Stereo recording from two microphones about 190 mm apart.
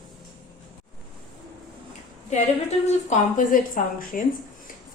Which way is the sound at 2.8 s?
40° left (ahead or behind).